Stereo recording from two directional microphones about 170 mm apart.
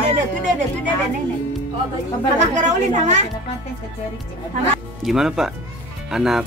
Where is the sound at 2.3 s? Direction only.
40° right (ahead or behind).